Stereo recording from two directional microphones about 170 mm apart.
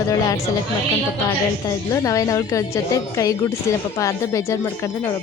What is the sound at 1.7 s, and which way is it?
A woman's voice, 20° left (ahead or behind).